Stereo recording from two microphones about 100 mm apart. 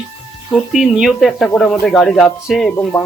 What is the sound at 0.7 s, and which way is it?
Speech, 5° right (ahead or behind).